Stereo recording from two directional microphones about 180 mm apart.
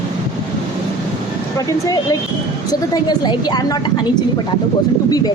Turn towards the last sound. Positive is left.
turn(degrees=25)  # may be behind; listen again after turning